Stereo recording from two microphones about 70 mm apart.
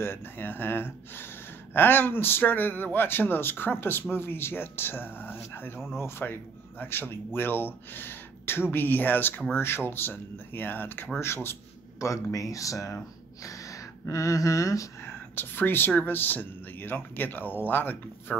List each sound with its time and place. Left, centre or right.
0.0 s a man's voice: left
12.0 s speech: left
15.0 s speech: left